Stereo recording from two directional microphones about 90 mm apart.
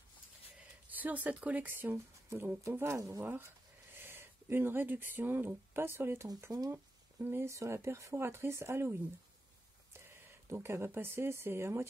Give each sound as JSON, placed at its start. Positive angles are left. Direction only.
{"t": 0.8, "sound": "speech", "side_deg": -20}
{"t": 10.5, "sound": "speech", "side_deg": -30}